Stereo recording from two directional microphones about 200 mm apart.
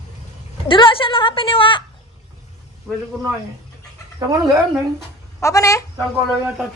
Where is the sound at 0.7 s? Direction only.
25° left (ahead or behind).